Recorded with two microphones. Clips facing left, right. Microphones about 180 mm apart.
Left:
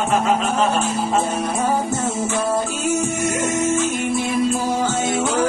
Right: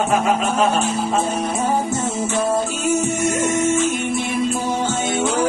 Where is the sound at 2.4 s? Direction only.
25° right (ahead or behind).